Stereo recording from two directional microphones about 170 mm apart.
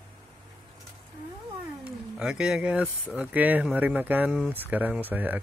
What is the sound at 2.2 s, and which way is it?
Speech, 5° right (ahead or behind).